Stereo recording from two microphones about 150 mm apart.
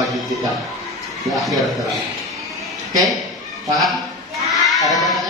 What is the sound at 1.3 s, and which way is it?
Speech, centre (ahead or behind).